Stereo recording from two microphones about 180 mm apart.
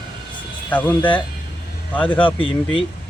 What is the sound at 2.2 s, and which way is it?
Speech, 30° left (ahead or behind).